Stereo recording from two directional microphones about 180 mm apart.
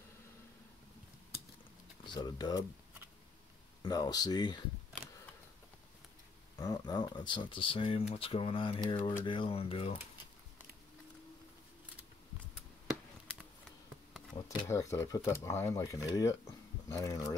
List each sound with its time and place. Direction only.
2.1 s speech: 25° left (ahead or behind)
3.8 s speech: 20° left (ahead or behind)
6.6 s speech: 20° left (ahead or behind)
14.3 s speech: 20° left (ahead or behind)